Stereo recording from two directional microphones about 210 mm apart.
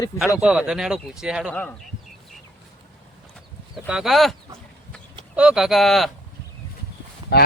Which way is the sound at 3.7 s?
5° right (ahead or behind).